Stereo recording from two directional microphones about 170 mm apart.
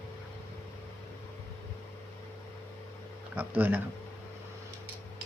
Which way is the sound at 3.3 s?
10° right (ahead or behind).